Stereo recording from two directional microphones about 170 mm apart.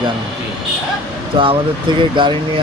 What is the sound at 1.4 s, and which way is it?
Speech, 30° right (ahead or behind).